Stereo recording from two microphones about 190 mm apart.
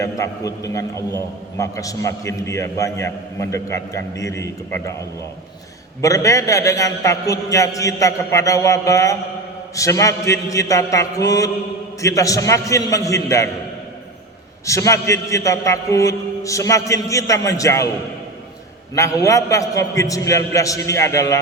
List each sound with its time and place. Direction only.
0.0 s a man's voice: 15° left (ahead or behind)
6.0 s a man's voice: 15° left (ahead or behind)
14.7 s a man's voice: 15° left (ahead or behind)
18.9 s a man's voice: 15° left (ahead or behind)